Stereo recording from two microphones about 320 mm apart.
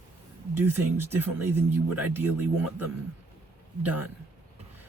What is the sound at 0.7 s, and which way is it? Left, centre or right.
Speech, centre.